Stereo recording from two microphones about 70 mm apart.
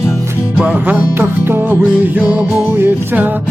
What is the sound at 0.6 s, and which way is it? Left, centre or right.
Music, right.